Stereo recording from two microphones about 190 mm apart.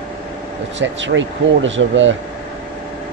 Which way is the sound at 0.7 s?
75° right (ahead or behind).